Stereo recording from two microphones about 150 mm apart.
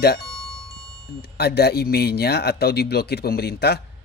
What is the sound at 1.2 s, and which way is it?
Speech, 90° left.